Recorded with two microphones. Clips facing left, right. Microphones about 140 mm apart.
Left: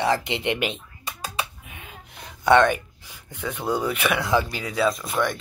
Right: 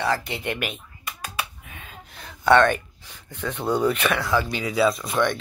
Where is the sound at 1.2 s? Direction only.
20° left (ahead or behind).